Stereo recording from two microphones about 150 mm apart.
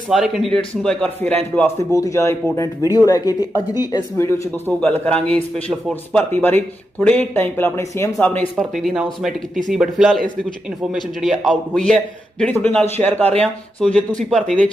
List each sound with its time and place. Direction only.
0.1 s a man's voice: centre (ahead or behind)
2.0 s speech: 20° left (ahead or behind)
4.7 s speech: 10° left (ahead or behind)
8.7 s a man's voice: centre (ahead or behind)